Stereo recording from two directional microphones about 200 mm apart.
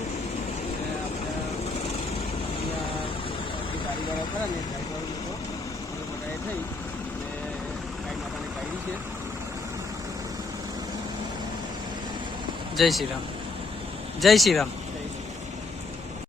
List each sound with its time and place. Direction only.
12.7 s speech: centre (ahead or behind)
14.2 s speech: centre (ahead or behind)